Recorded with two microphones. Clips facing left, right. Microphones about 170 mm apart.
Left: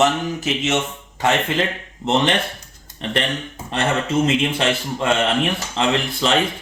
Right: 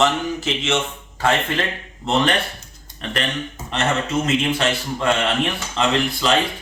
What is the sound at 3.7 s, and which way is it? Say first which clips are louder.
A man's voice: left 1 dB; 30° left (ahead or behind).